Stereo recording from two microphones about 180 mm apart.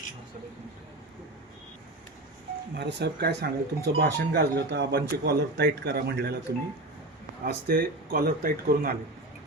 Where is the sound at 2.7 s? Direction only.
70° right (ahead or behind).